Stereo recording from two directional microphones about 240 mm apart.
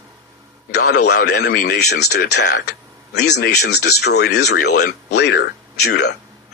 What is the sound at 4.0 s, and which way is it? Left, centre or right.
Speech, left.